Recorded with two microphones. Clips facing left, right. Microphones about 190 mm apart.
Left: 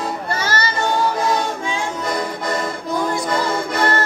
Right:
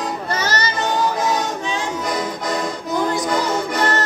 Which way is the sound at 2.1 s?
Centre (ahead or behind).